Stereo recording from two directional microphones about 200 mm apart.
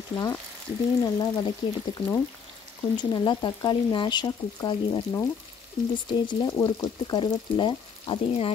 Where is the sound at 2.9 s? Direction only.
20° left (ahead or behind).